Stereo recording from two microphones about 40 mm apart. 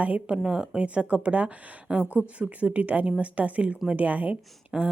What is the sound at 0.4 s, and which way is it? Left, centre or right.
Speech, right.